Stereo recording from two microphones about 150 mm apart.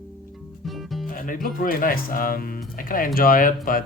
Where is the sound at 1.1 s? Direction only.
65° left (ahead or behind).